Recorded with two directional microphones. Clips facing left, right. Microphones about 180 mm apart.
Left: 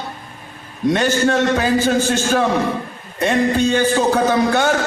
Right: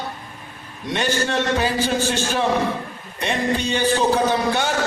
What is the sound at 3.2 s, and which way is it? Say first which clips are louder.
A man's voice: left 6 dB; 45° left (ahead or behind).